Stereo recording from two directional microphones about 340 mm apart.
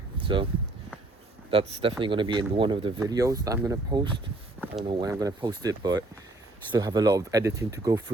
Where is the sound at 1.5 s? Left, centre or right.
Centre.